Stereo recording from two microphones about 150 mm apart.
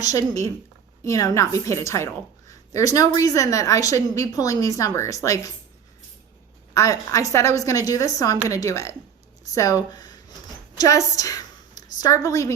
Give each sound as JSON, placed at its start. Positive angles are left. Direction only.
{"t": 0.0, "sound": "a woman's voice", "side_deg": 25}
{"t": 6.7, "sound": "a woman's voice", "side_deg": 20}
{"t": 9.9, "sound": "a sound", "side_deg": 25}
{"t": 10.8, "sound": "a woman's voice", "side_deg": 20}